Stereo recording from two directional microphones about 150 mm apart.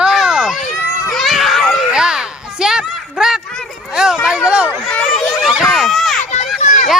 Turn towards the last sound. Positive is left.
turn(degrees=55)  # may be behind; listen again after turning